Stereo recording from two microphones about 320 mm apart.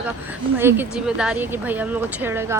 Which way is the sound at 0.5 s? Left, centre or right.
Centre.